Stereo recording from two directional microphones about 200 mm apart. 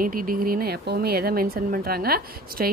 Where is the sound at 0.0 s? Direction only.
45° right (ahead or behind).